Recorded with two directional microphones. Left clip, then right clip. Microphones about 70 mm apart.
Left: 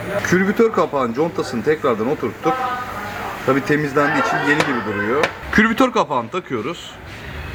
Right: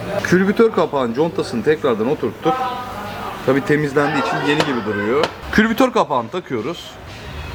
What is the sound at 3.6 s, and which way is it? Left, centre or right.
Speech, right.